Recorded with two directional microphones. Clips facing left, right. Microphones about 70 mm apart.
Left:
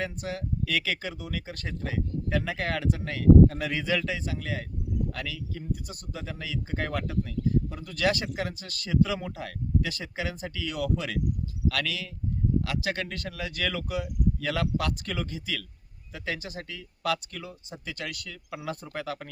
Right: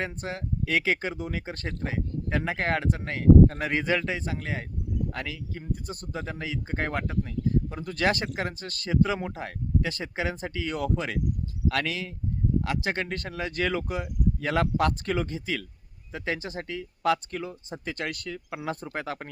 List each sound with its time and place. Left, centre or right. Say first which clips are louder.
0.0 s speech: even; right